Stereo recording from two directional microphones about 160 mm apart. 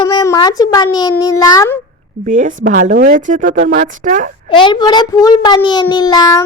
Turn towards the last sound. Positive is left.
turn(degrees=25)  # may be behind; listen again after turning